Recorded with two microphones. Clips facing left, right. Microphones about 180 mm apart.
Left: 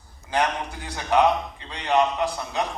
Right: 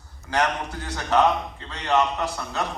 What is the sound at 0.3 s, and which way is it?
A man's voice, 15° left (ahead or behind).